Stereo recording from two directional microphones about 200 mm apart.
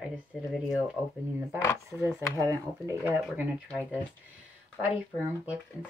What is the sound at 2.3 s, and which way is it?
Speech, 15° right (ahead or behind).